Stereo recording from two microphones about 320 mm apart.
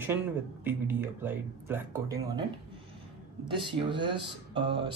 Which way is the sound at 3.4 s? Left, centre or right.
Centre.